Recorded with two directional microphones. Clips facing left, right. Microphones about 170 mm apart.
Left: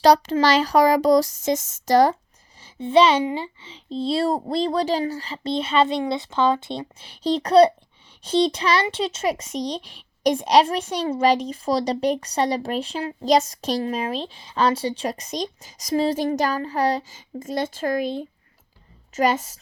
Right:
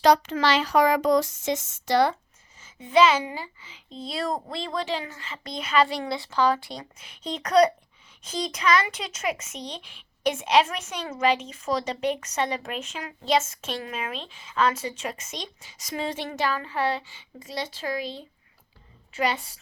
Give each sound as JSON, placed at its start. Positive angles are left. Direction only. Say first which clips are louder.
{"t": 0.0, "sound": "speech", "louder": "left 4 dB", "side_deg": 35}
{"t": 2.6, "sound": "a woman's voice", "louder": "left 3 dB", "side_deg": 30}